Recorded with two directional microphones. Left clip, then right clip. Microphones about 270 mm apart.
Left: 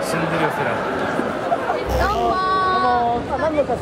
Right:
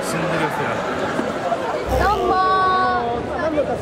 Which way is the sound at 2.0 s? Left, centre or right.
Centre.